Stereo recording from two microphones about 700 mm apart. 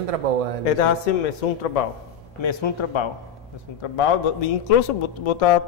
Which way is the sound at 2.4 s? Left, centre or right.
Left.